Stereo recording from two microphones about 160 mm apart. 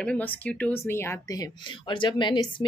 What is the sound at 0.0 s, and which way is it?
A woman's voice, 10° left (ahead or behind).